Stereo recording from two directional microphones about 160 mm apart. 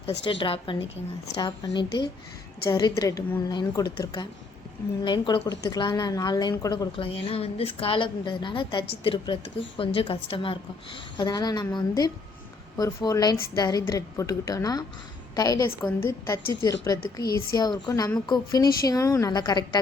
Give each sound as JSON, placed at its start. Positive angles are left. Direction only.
{"t": 0.0, "sound": "a woman's voice", "side_deg": 35}
{"t": 6.9, "sound": "a woman's voice", "side_deg": 35}